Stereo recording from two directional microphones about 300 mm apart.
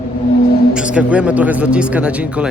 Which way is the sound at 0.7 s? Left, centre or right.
Centre.